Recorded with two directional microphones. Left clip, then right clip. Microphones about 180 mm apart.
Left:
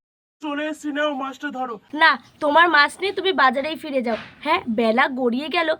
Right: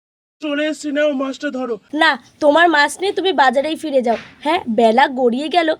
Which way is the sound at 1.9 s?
40° right (ahead or behind).